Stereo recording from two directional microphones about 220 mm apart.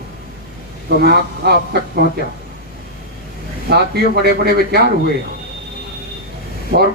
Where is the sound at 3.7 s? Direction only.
45° right (ahead or behind).